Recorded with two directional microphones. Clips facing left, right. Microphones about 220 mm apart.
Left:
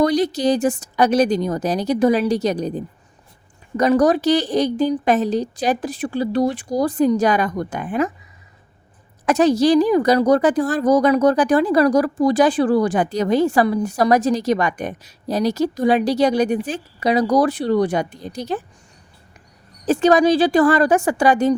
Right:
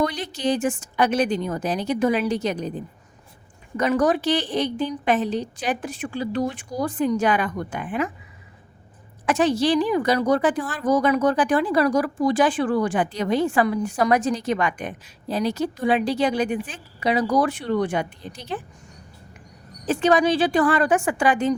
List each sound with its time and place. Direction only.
0.0 s a woman's voice: 40° left (ahead or behind)
9.2 s a woman's voice: 40° left (ahead or behind)
19.8 s a woman's voice: 40° left (ahead or behind)